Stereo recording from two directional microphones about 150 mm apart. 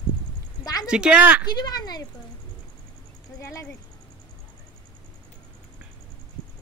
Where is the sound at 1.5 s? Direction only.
25° left (ahead or behind).